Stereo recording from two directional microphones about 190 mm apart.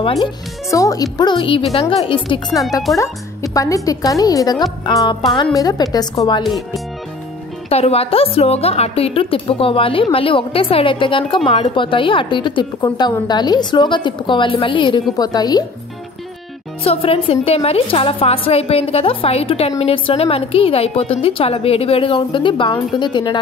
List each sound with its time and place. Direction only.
0.0 s a woman's voice: 30° left (ahead or behind)
0.7 s a woman's voice: 15° left (ahead or behind)
7.7 s a woman's voice: 30° left (ahead or behind)
16.8 s a woman's voice: 30° left (ahead or behind)